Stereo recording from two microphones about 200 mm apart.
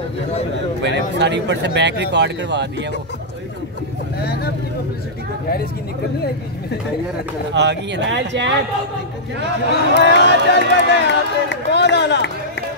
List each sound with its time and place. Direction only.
0.8 s speech: 60° right (ahead or behind)
4.2 s speech: 50° left (ahead or behind)
7.5 s speech: 60° right (ahead or behind)
10.0 s speech: 60° left (ahead or behind)